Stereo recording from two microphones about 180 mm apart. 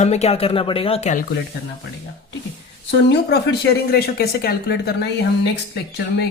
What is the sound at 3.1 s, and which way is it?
Speech, 65° left (ahead or behind).